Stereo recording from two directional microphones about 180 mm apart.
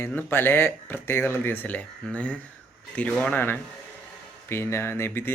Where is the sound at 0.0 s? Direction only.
10° left (ahead or behind).